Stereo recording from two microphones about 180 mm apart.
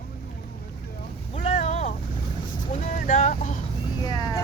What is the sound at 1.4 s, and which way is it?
Boat, 35° left (ahead or behind).